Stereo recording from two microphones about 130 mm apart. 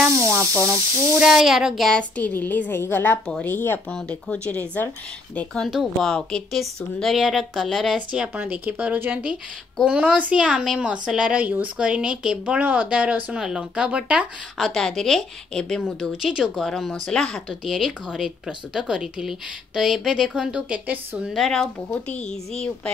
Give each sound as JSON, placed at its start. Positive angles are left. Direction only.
{"t": 0.0, "sound": "speech", "side_deg": -20}
{"t": 1.2, "sound": "a woman's voice", "side_deg": -5}
{"t": 14.6, "sound": "a woman's voice", "side_deg": 5}
{"t": 21.3, "sound": "a woman's voice", "side_deg": 5}